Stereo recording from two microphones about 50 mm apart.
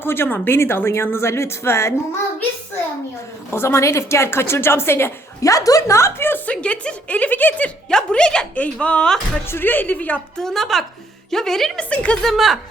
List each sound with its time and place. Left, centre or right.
0.0 s a woman's voice: left
3.5 s a woman's voice: left
6.1 s speech: left
6.4 s a woman's voice: left
7.9 s a woman's voice: centre
9.5 s speech: left
10.3 s a woman's voice: centre
11.8 s a woman's voice: left
12.2 s a woman's voice: centre